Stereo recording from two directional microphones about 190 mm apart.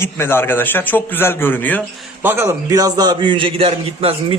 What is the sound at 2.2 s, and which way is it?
A man's voice, 15° right (ahead or behind).